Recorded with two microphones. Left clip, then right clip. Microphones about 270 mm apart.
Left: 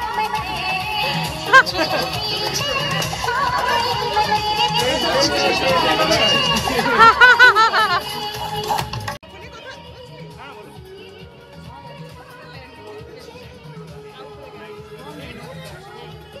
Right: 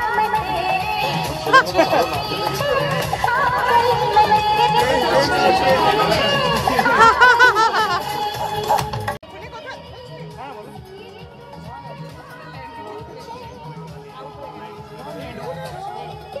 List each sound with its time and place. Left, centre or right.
0.0 s music: right
6.3 s chatter: right
7.0 s snicker: centre
8.0 s music: right